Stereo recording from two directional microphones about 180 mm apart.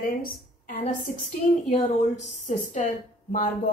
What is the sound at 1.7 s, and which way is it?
A woman's voice, 40° left (ahead or behind).